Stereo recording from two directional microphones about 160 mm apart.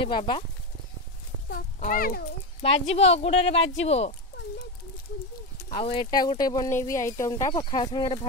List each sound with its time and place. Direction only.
0.0 s speech: 30° left (ahead or behind)
1.5 s speech: 60° left (ahead or behind)
2.6 s speech: 40° left (ahead or behind)
5.8 s speech: 30° left (ahead or behind)